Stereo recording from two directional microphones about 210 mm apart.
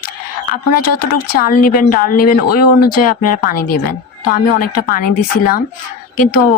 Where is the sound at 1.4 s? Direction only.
45° left (ahead or behind).